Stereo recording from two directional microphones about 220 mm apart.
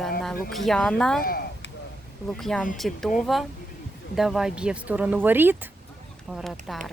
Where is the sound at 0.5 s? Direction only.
Centre (ahead or behind).